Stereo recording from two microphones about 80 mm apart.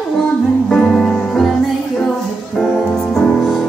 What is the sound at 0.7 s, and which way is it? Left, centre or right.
Music, centre.